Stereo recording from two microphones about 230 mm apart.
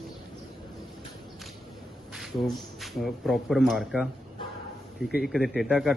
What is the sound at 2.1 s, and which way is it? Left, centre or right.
Speech, centre.